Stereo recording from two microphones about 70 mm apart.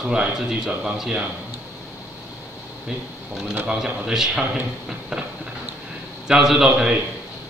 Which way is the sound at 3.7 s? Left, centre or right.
Centre.